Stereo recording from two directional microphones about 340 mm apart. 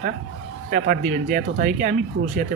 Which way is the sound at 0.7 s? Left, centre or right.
Right.